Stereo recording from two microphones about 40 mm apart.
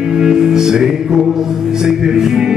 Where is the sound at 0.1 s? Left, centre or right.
Centre.